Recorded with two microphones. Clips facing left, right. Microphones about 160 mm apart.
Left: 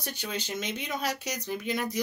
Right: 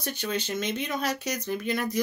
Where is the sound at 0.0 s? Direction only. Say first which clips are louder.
Right 5 dB; 15° left (ahead or behind).